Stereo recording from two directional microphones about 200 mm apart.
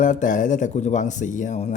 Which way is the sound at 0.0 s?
40° left (ahead or behind).